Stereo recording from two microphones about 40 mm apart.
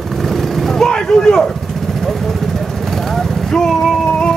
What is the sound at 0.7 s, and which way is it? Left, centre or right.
Vehicle, centre.